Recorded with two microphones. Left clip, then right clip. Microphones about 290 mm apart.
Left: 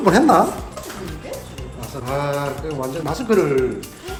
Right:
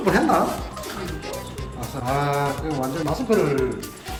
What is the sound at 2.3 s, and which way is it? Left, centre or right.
Speech, centre.